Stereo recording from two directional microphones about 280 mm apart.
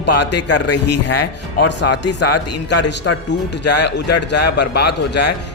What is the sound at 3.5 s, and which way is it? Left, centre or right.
A man's voice, left.